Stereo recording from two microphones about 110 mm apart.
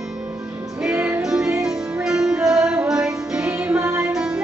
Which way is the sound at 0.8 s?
10° right (ahead or behind).